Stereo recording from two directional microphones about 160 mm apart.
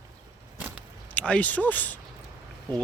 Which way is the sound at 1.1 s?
10° left (ahead or behind).